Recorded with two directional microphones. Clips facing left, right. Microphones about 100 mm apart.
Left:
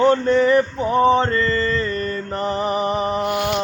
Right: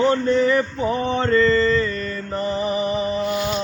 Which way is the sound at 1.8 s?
50° left (ahead or behind).